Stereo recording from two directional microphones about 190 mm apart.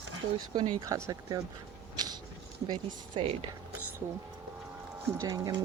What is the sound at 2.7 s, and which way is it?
Speech, 30° right (ahead or behind).